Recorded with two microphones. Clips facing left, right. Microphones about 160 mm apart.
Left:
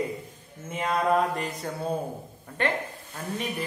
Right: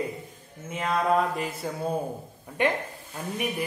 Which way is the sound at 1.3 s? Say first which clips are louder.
Right 1 dB; 5° right (ahead or behind).